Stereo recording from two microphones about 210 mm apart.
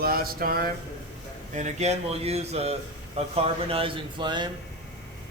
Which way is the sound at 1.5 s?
35° right (ahead or behind).